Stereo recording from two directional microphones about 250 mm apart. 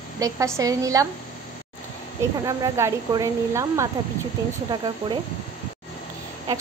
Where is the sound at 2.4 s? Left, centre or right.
Centre.